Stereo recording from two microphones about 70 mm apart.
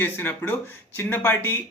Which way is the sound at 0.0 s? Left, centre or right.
Left.